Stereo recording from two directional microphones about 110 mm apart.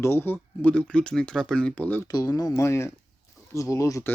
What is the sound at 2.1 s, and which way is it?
Speech, 35° left (ahead or behind).